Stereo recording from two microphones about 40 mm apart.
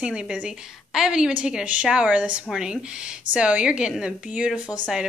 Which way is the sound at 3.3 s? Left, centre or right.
Right.